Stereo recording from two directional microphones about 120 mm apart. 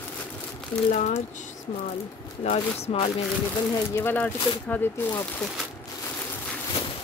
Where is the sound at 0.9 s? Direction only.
80° left.